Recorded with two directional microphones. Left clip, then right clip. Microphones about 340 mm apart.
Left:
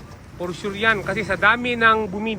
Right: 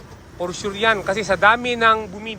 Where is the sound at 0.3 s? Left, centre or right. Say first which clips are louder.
Right 2 dB; centre.